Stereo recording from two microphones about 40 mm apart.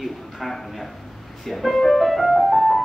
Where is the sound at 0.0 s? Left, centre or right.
Centre.